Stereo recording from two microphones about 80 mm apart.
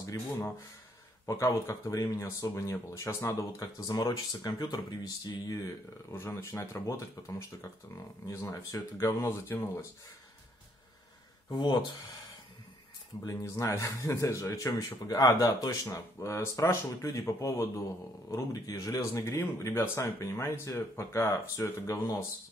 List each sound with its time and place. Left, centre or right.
0.0 s speech: left
3.5 s speech: left
6.1 s speech: left
11.5 s speech: left
13.2 s speech: left
19.1 s speech: left